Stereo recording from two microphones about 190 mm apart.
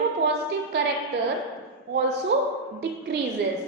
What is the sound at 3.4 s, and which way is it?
Speech, 60° right (ahead or behind).